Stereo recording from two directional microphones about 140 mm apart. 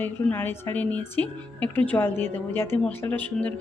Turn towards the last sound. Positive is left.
turn(degrees=10)  # may be behind; listen again after turning